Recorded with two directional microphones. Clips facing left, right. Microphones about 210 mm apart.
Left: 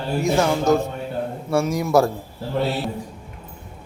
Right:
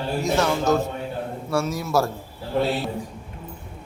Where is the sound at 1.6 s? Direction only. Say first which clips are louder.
Left 6 dB; 15° left (ahead or behind).